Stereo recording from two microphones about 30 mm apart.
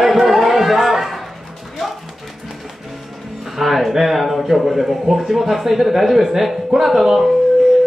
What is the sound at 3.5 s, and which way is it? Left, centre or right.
A child's voice, centre.